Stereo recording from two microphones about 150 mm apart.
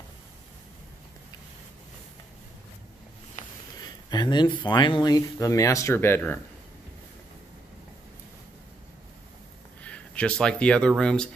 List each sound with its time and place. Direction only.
3.8 s speech: 30° left (ahead or behind)
9.8 s speech: 10° left (ahead or behind)